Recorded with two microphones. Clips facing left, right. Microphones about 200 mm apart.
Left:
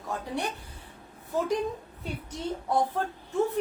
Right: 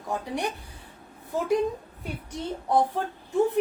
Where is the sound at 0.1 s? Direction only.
15° right (ahead or behind).